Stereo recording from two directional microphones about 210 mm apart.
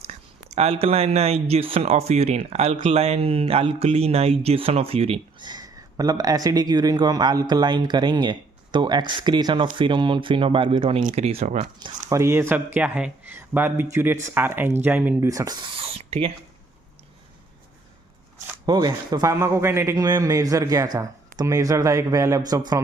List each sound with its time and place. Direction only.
0.5 s speech: 30° right (ahead or behind)
12.0 s a man's voice: 15° right (ahead or behind); by 16.3 s 30° right (ahead or behind)
18.6 s a man's voice: 20° right (ahead or behind)